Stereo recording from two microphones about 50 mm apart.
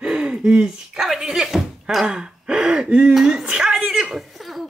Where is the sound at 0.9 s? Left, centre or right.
Centre.